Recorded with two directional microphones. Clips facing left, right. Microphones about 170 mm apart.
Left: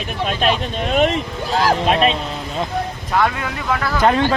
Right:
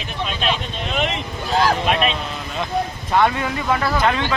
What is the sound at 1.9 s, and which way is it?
Speech, 35° left (ahead or behind).